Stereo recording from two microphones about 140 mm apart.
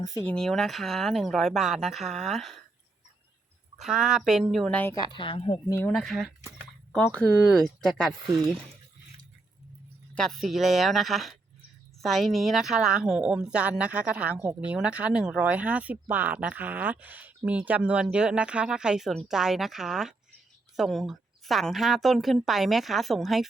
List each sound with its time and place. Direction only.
0.3 s a woman's voice: 5° left (ahead or behind)
3.8 s a woman's voice: 5° right (ahead or behind)
5.0 s speech: 35° left (ahead or behind)
5.9 s a woman's voice: centre (ahead or behind)
10.2 s a woman's voice: centre (ahead or behind)